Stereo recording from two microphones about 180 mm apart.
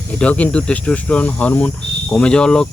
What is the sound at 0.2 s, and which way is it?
Speech, 5° left (ahead or behind).